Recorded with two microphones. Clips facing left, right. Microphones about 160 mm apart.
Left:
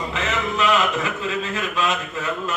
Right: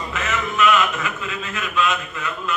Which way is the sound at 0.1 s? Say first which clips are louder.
Right 1 dB; 30° left (ahead or behind).